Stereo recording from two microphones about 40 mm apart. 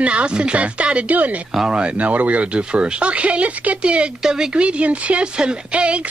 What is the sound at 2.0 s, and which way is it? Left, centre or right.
Speech, right.